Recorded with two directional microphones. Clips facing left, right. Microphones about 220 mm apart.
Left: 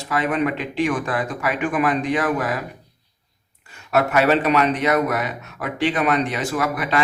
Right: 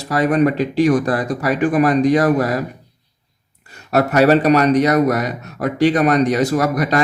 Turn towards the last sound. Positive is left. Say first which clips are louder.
# right 5 dB
turn(degrees=-40)  # may be behind; listen again after turning